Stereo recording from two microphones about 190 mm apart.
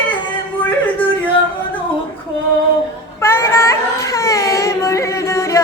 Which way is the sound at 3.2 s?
15° left (ahead or behind).